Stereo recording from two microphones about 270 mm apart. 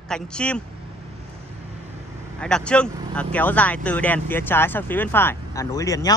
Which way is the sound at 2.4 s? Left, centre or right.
Centre.